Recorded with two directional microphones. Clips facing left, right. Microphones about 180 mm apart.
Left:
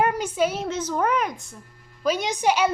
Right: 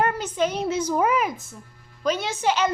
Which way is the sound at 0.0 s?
10° left (ahead or behind).